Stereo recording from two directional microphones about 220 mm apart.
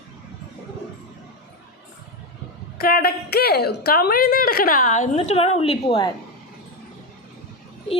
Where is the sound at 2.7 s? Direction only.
45° left (ahead or behind); by 6.1 s 25° left (ahead or behind).